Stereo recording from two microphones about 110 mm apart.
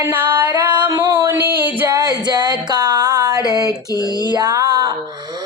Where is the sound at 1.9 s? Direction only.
40° right (ahead or behind).